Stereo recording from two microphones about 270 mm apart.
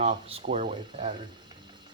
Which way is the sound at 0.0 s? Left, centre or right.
Right.